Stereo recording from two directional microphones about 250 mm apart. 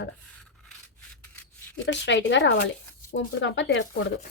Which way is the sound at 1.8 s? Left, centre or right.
Left.